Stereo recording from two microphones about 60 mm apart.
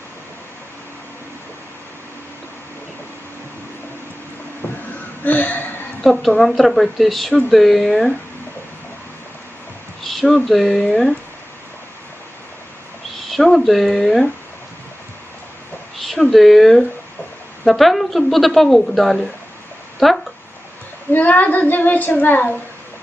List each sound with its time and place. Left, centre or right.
4.6 s a sound: left
6.0 s speech: centre
10.0 s speech: centre
13.3 s speech: centre
16.0 s a sound: centre
16.3 s speech: centre
21.1 s speech: left